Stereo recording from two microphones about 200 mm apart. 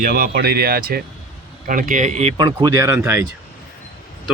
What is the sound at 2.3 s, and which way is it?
Speech, 20° right (ahead or behind).